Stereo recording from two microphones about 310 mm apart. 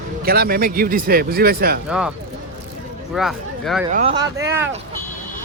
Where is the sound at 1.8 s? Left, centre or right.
Centre.